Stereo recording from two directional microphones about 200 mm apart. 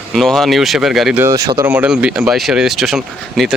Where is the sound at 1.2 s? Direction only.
15° right (ahead or behind).